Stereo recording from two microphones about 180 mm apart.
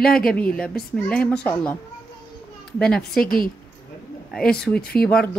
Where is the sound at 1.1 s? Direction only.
5° left (ahead or behind).